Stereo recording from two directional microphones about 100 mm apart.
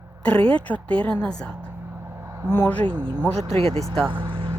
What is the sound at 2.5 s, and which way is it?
Speech, 20° left (ahead or behind).